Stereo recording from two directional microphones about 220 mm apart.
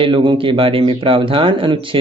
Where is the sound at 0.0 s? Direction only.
20° right (ahead or behind).